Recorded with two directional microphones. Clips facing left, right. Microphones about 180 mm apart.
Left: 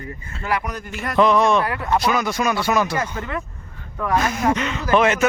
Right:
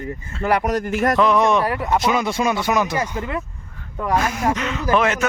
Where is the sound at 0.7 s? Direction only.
80° right.